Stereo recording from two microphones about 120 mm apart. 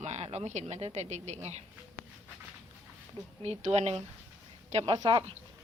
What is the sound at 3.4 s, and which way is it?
Speech, 65° right (ahead or behind).